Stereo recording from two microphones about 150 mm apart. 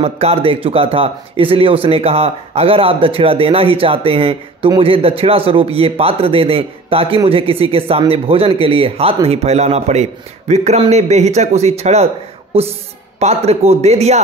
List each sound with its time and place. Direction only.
0.0 s speech: 40° right (ahead or behind)
13.2 s speech: 45° right (ahead or behind)